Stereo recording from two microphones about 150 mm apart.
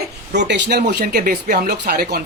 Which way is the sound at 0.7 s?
90° right.